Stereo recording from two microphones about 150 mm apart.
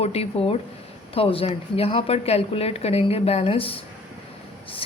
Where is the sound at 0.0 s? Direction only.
40° left (ahead or behind).